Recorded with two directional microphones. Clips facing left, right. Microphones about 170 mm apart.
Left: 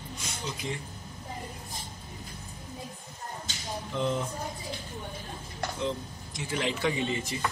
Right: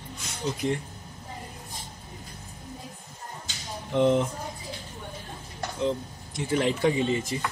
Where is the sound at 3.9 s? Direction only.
65° right (ahead or behind).